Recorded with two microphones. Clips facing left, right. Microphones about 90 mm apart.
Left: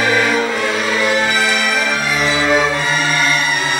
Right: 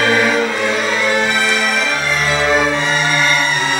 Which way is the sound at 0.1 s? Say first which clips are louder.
Right 1 dB; centre (ahead or behind).